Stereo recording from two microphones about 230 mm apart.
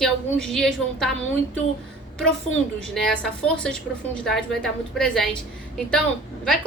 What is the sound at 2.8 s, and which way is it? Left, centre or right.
A woman's voice, centre.